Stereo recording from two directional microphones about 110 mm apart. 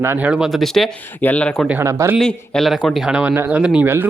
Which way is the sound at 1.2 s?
15° left (ahead or behind).